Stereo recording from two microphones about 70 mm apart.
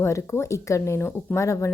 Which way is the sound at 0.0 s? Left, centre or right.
Left.